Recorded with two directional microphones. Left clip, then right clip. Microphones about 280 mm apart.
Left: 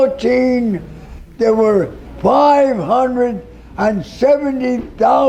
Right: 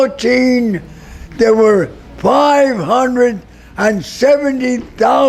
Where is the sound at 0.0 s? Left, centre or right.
Right.